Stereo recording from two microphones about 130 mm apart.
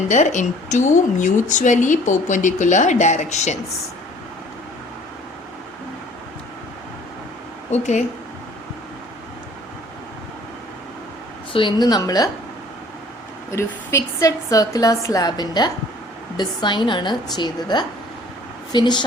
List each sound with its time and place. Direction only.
0.1 s a woman's voice: 70° left (ahead or behind)
7.7 s speech: 60° left (ahead or behind)
11.5 s a woman's voice: 35° left (ahead or behind)
13.5 s a woman's voice: 20° left (ahead or behind)